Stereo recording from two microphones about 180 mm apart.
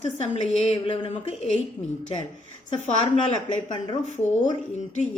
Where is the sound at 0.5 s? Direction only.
35° left (ahead or behind).